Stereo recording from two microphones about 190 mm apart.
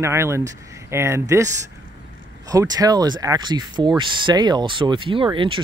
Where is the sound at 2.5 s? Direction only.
20° right (ahead or behind).